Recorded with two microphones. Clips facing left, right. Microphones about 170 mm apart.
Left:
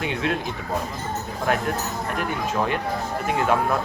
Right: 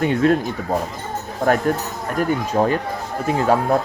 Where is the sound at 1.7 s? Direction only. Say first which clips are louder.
Right 4 dB; 45° right (ahead or behind).